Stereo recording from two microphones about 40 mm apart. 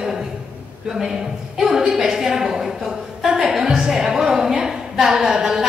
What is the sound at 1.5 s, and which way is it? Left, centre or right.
A woman's voice, centre.